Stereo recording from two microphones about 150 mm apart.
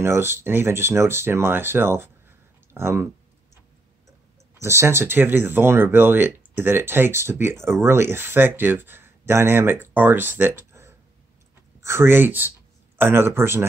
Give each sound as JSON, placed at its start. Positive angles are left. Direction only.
{"t": 0.0, "sound": "speech", "side_deg": -15}
{"t": 4.6, "sound": "speech", "side_deg": -20}